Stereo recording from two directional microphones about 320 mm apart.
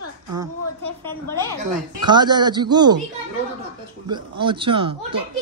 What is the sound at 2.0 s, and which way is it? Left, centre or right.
Speech, centre.